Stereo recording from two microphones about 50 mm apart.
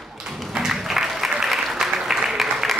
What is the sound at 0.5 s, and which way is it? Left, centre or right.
Applause, centre.